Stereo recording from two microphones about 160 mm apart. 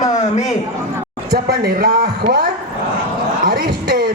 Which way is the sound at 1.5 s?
80° right.